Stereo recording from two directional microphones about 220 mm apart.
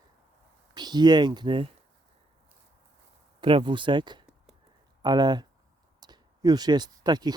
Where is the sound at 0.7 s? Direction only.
20° right (ahead or behind).